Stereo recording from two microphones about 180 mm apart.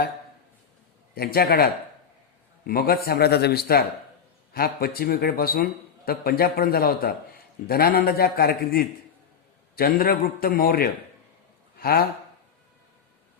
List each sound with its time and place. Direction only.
1.1 s a man's voice: 60° left (ahead or behind)